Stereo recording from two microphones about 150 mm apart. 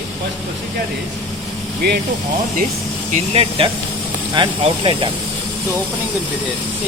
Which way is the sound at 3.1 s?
40° right (ahead or behind).